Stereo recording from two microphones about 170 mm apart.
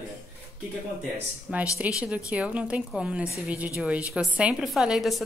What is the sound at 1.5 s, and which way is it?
A woman's voice, 10° right (ahead or behind).